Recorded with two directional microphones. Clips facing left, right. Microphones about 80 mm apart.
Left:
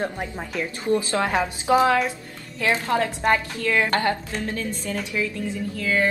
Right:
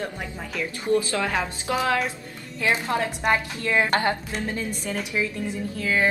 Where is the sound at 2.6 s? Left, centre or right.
Centre.